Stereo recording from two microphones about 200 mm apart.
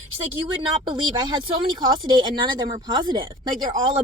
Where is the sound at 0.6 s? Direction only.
20° right (ahead or behind).